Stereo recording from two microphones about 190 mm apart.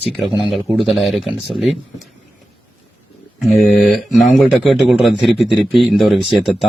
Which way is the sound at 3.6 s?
Centre (ahead or behind).